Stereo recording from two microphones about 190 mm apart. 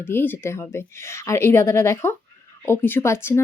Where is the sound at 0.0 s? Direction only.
10° left (ahead or behind).